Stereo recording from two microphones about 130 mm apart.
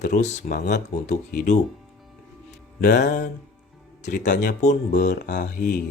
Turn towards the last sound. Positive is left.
turn(degrees=85)